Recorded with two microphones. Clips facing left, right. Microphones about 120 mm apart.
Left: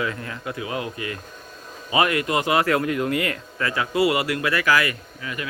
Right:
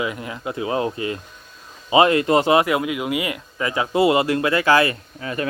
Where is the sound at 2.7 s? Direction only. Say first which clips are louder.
Even; 10° right (ahead or behind); by 5.5 s 35° right (ahead or behind).